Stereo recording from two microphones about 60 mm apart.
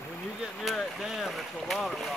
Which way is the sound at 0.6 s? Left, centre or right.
Centre.